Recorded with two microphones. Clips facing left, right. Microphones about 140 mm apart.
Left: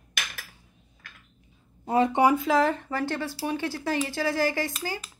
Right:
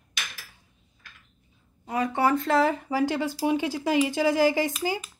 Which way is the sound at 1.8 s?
25° left (ahead or behind).